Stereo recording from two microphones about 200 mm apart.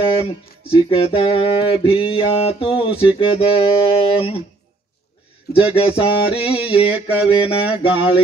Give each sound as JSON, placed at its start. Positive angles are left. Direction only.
{"t": 0.0, "sound": "music", "side_deg": 25}
{"t": 5.8, "sound": "music", "side_deg": 25}
{"t": 6.9, "sound": "mantra", "side_deg": -10}
{"t": 7.2, "sound": "music", "side_deg": 25}